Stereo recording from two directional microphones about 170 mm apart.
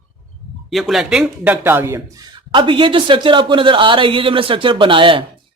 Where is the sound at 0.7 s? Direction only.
Centre (ahead or behind); by 5.2 s 30° right (ahead or behind).